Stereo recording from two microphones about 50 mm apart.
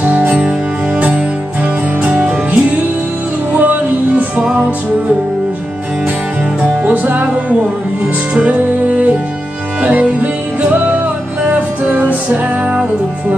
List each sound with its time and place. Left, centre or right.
0.0 s music: right
6.6 s music: right